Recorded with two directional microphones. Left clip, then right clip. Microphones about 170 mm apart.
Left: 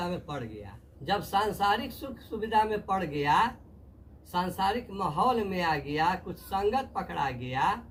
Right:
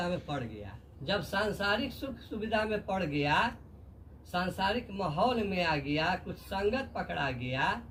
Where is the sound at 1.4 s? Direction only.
15° left (ahead or behind).